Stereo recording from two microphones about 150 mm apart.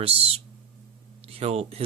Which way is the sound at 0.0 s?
40° right (ahead or behind).